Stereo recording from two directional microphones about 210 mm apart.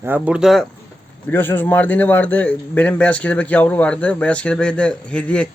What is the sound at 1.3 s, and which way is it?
A man's voice, 10° left (ahead or behind).